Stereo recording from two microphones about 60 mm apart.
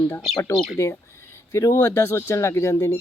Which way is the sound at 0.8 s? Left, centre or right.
Left.